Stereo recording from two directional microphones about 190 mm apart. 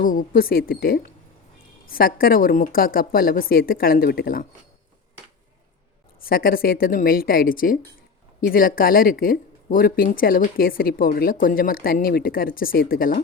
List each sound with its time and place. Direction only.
0.0 s speech: 45° left (ahead or behind)
6.2 s speech: 50° left (ahead or behind)